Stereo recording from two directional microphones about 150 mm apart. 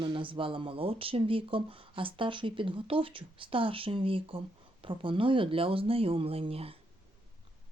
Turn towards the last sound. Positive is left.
turn(degrees=-40)  # may be behind; listen again after turning